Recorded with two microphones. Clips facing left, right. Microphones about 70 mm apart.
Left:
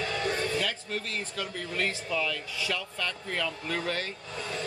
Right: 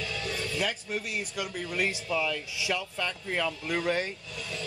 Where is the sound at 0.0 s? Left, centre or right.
Left.